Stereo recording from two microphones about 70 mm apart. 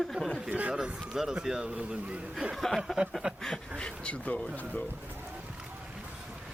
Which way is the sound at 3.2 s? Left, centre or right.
Centre.